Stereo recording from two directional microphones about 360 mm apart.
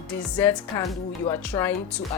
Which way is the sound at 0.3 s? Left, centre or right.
Centre.